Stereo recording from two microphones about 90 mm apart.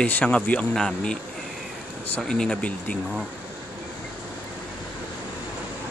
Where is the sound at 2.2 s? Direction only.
5° left (ahead or behind).